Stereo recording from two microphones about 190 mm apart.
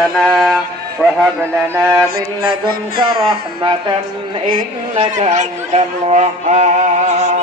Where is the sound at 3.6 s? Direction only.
25° right (ahead or behind).